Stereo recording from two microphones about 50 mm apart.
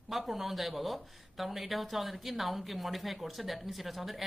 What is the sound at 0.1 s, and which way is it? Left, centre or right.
Speech, centre.